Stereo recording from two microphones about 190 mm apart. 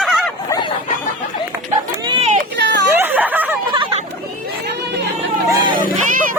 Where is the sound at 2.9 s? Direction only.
10° right (ahead or behind).